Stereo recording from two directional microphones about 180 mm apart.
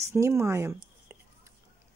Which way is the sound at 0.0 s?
15° right (ahead or behind).